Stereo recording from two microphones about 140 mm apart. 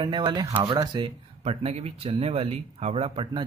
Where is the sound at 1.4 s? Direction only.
45° right (ahead or behind).